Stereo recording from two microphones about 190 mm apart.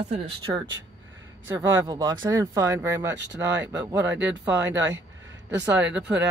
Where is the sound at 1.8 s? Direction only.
20° right (ahead or behind).